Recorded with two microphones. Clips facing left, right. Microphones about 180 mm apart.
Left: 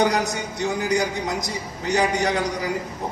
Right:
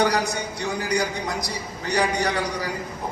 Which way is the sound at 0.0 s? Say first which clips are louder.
Left 1 dB; 20° left (ahead or behind).